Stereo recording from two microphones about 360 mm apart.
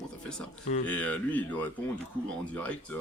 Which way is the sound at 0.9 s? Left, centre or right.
Centre.